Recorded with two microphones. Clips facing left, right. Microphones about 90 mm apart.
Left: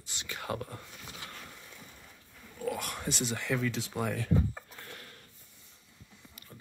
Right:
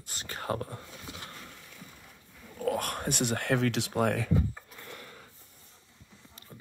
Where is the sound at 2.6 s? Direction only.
50° right (ahead or behind); by 4.1 s 70° right (ahead or behind).